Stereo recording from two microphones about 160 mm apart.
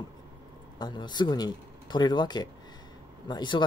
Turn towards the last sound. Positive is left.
turn(degrees=30)  # may be behind; listen again after turning